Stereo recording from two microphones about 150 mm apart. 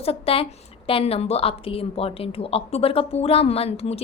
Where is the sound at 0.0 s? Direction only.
40° left (ahead or behind).